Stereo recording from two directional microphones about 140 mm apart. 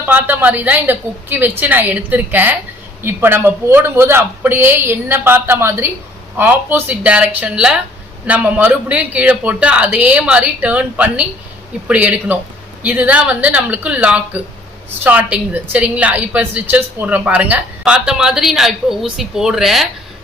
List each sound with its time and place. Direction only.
0.0 s a woman's voice: 15° right (ahead or behind)